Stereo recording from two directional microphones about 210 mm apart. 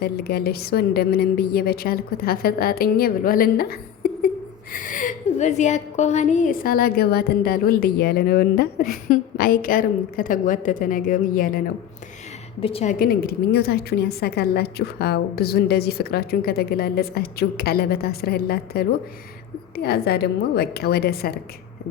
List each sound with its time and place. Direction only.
0.0 s a woman's voice: 50° left (ahead or behind)
12.5 s a woman's voice: 25° left (ahead or behind); by 21.3 s 45° left (ahead or behind)